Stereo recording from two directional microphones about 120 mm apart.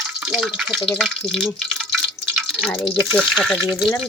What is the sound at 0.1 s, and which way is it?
Speech, 5° right (ahead or behind).